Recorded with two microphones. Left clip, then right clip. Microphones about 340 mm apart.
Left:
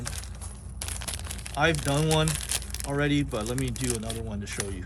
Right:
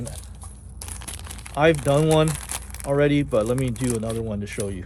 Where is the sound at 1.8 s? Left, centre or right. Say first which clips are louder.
Right 7 dB; centre.